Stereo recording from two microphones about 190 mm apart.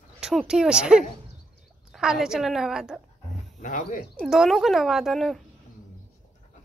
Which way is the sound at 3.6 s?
40° left (ahead or behind).